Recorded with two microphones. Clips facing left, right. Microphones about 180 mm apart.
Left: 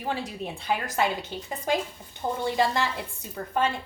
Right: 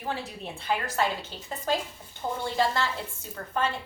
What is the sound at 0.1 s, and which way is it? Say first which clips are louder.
A woman's voice: left 3 dB; 15° left (ahead or behind).